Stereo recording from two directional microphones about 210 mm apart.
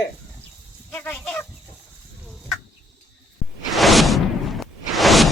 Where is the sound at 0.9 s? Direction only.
10° left (ahead or behind).